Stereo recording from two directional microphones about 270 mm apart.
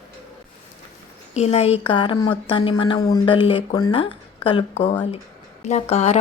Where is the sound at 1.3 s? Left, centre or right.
Left.